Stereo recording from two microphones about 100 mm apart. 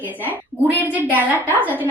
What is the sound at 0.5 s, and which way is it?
A woman's voice, 20° right (ahead or behind).